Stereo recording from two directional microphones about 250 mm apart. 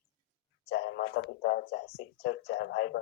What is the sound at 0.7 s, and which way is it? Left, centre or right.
Speech, left.